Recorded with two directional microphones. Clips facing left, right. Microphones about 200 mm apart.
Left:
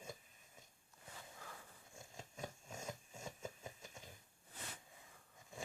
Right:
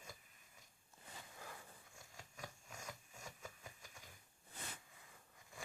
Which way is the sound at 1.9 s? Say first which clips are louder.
Left 8 dB; 25° left (ahead or behind).